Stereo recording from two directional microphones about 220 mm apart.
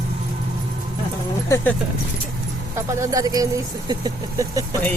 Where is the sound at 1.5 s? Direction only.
10° left (ahead or behind).